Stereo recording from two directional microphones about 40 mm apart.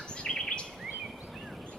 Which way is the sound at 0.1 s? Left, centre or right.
Left.